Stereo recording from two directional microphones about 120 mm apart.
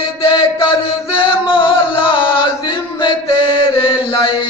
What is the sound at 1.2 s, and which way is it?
Music, 45° left (ahead or behind).